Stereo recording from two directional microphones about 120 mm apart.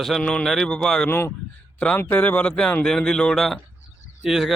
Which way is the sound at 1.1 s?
20° left (ahead or behind).